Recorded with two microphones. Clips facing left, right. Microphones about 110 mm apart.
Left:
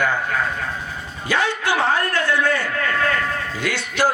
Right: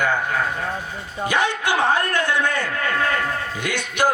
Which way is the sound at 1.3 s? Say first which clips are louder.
Left 1 dB; 20° right (ahead or behind).